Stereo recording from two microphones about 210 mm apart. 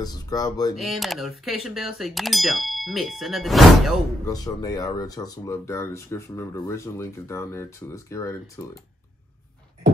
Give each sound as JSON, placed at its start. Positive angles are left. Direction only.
{"t": 0.0, "sound": "speech", "side_deg": 20}
{"t": 0.7, "sound": "clang", "side_deg": 0}
{"t": 4.3, "sound": "speech", "side_deg": 15}